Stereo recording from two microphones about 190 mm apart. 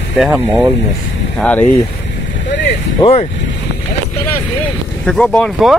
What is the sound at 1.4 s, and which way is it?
Speech, 10° left (ahead or behind).